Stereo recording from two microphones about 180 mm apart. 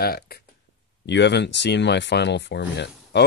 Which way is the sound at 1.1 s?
75° left (ahead or behind).